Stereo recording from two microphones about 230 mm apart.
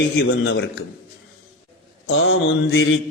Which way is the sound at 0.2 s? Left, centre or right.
Left.